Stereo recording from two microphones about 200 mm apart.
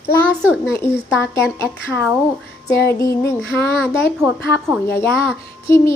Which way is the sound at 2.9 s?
15° left (ahead or behind).